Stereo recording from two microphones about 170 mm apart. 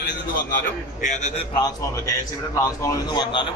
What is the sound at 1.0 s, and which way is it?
Speech, 45° left (ahead or behind).